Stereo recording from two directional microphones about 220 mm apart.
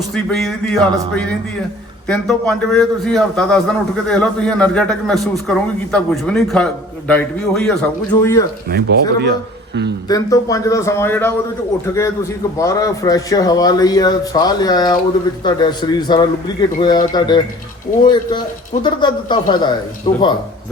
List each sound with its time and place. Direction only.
0.1 s a man's voice: centre (ahead or behind)
8.7 s speech: 45° right (ahead or behind)
10.1 s a man's voice: 15° left (ahead or behind)